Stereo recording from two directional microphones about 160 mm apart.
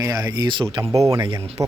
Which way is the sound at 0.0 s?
20° right (ahead or behind).